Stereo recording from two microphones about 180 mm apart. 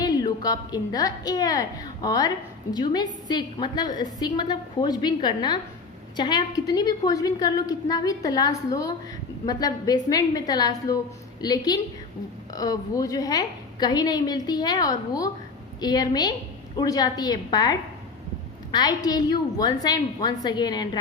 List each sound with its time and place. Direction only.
0.0 s a woman's voice: 20° left (ahead or behind)